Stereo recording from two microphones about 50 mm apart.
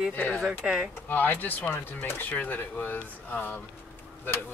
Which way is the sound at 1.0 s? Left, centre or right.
Left.